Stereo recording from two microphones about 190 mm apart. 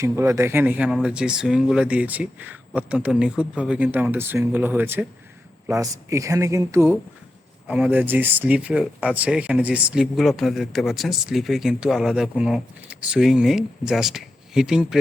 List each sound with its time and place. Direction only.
0.0 s speech: 15° right (ahead or behind)